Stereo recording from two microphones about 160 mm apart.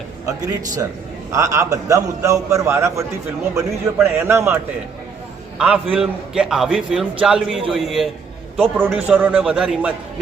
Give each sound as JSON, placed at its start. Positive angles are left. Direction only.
{"t": 1.3, "sound": "a man's voice", "side_deg": -20}